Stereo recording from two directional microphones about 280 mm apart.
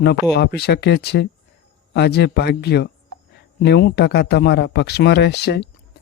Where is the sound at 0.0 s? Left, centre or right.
Left.